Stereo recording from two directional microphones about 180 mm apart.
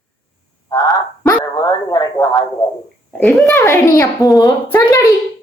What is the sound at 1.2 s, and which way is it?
Dog, 20° left (ahead or behind).